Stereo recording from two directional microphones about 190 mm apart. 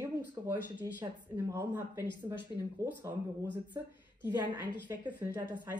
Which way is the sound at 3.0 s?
10° right (ahead or behind).